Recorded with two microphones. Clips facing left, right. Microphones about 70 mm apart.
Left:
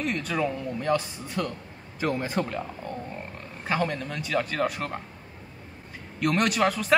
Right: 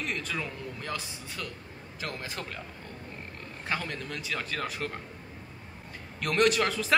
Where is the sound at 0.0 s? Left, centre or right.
Centre.